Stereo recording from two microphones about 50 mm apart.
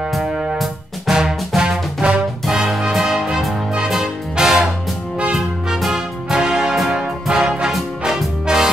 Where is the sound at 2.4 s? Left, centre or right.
Centre.